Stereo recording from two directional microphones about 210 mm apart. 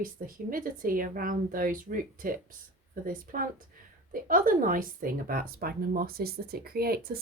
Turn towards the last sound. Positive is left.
turn(degrees=-45)  # may be behind; listen again after turning